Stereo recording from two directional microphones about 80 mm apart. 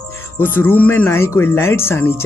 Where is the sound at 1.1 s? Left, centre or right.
Left.